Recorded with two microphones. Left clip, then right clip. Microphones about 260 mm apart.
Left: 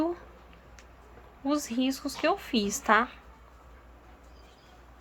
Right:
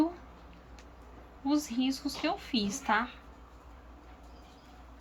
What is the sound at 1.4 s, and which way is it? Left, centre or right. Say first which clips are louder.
Speech: left 2 dB; centre.